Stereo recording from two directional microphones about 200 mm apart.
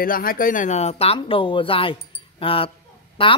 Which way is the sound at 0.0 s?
45° left (ahead or behind).